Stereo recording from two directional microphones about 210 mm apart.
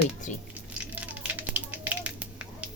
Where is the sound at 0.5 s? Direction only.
5° right (ahead or behind).